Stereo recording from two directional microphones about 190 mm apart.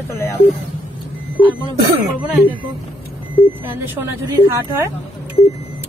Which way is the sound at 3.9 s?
15° right (ahead or behind).